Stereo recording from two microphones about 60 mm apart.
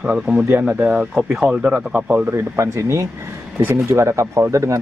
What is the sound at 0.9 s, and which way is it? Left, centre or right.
Speech, centre.